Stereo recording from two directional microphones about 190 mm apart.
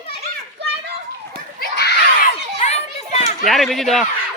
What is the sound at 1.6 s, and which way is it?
Children playing, 55° left (ahead or behind).